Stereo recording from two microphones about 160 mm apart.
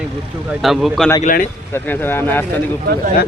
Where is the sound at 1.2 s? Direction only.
60° left (ahead or behind).